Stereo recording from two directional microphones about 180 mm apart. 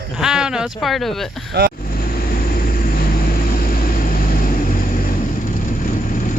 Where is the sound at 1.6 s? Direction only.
55° right (ahead or behind).